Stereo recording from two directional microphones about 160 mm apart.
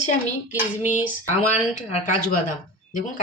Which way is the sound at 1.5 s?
45° left (ahead or behind).